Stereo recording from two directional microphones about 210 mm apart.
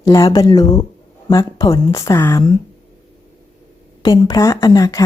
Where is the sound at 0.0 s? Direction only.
15° left (ahead or behind).